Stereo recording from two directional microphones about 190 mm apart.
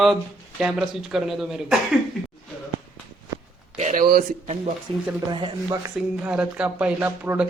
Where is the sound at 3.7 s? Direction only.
40° right (ahead or behind).